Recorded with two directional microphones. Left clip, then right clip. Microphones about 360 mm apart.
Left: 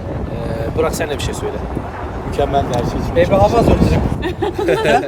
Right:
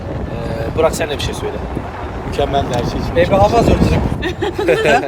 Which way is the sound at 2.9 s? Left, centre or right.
Centre.